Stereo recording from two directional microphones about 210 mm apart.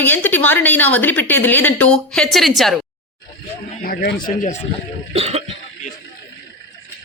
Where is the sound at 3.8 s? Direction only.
45° left (ahead or behind).